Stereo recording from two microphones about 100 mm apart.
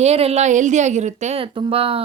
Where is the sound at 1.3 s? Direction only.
65° right (ahead or behind).